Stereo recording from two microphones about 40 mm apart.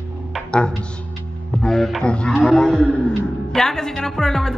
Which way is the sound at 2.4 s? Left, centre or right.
Centre.